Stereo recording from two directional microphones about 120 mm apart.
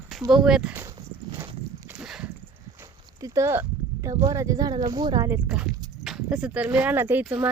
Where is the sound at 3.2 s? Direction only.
25° right (ahead or behind).